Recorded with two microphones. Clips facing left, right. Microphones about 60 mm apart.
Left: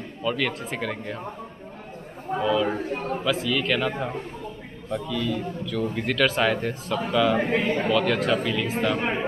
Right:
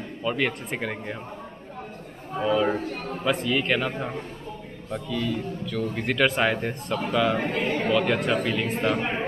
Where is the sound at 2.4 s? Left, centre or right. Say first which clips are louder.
Right 1 dB; right.